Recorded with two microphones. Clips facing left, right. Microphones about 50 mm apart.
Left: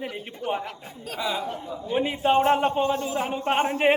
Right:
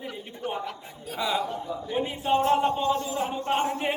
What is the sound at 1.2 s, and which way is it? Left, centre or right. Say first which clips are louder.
Speech: right 1 dB; centre.